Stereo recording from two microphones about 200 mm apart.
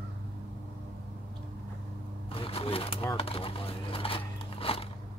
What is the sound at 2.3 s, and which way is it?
Shuffling cards, 30° left (ahead or behind).